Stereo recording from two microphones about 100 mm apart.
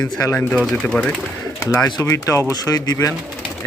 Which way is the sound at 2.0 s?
30° left (ahead or behind).